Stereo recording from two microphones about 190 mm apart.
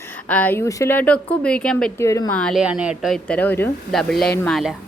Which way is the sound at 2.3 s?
5° left (ahead or behind).